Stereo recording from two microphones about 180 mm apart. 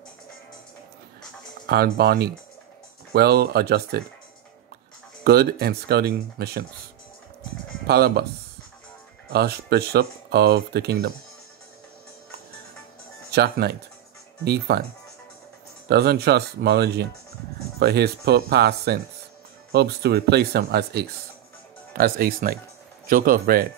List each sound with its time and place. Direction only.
1.7 s speech: 65° right (ahead or behind)
5.2 s speech: 60° right (ahead or behind)
7.8 s speech: 60° right (ahead or behind)
9.3 s speech: 65° right (ahead or behind)
13.3 s speech: 60° right (ahead or behind)
15.9 s speech: 60° right (ahead or behind)